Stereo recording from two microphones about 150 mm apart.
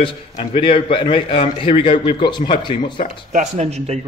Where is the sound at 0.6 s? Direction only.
35° left (ahead or behind).